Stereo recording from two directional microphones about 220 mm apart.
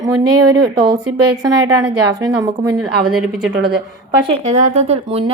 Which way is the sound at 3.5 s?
50° right (ahead or behind).